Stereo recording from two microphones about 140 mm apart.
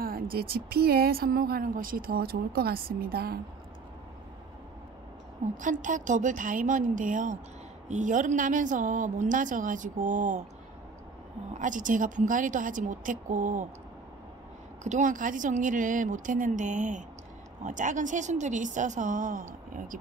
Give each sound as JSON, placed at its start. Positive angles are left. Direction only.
{"t": 0.0, "sound": "speech", "side_deg": -90}
{"t": 5.6, "sound": "a woman's voice", "side_deg": -65}
{"t": 11.5, "sound": "a woman's voice", "side_deg": -65}
{"t": 14.8, "sound": "a woman's voice", "side_deg": -60}